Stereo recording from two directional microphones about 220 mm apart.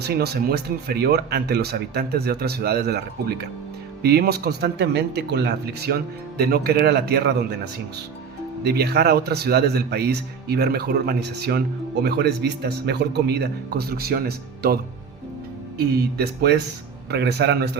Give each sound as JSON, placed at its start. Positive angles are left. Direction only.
{"t": 0.0, "sound": "speech", "side_deg": -45}
{"t": 16.1, "sound": "speech", "side_deg": -45}